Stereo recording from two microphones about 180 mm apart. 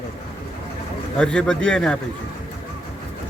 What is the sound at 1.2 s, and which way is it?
Speech, 5° left (ahead or behind).